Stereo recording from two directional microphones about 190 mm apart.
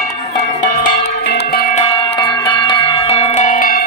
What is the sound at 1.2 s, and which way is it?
Music, 60° left (ahead or behind).